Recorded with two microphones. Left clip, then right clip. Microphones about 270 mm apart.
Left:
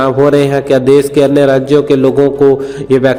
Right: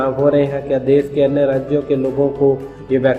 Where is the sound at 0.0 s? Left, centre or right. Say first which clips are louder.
Left 6 dB; left.